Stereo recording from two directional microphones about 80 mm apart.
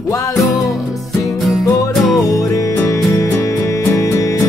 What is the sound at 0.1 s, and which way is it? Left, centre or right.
Music, left.